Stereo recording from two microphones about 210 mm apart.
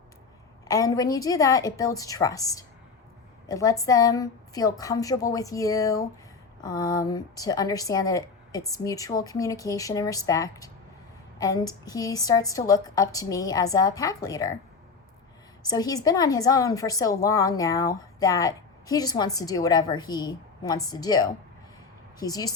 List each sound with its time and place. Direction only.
0.7 s a woman's voice: 15° left (ahead or behind)
15.6 s a woman's voice: 20° left (ahead or behind)